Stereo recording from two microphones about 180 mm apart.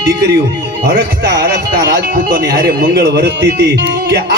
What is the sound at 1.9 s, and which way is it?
A man's voice, 60° right (ahead or behind).